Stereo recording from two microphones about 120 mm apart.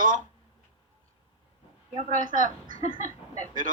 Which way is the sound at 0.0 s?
90° right.